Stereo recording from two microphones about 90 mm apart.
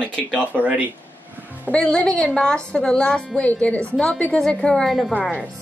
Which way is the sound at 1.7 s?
15° left (ahead or behind).